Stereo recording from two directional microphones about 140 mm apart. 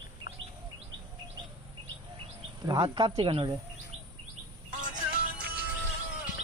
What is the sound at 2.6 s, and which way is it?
Speech, 30° right (ahead or behind).